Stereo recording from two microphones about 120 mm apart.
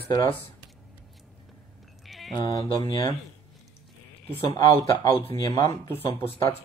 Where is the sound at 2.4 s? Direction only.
35° left (ahead or behind).